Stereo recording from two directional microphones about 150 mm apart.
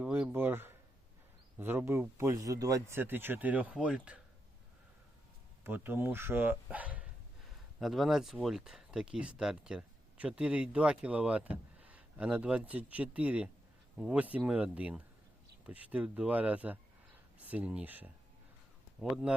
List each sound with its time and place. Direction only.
0.0 s a sound: 10° right (ahead or behind)
1.5 s speech: 15° right (ahead or behind)
5.6 s speech: 15° right (ahead or behind)
19.1 s speech: 5° right (ahead or behind)